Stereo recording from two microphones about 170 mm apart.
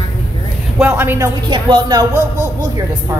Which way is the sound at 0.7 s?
10° right (ahead or behind).